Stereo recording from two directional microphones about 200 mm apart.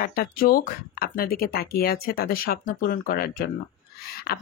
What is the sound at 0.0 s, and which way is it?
Speech, 45° left (ahead or behind).